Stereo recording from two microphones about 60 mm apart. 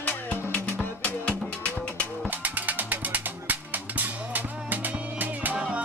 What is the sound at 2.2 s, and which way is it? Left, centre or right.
Music, right.